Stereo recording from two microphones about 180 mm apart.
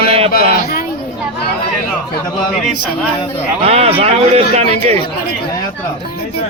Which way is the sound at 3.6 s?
35° right (ahead or behind).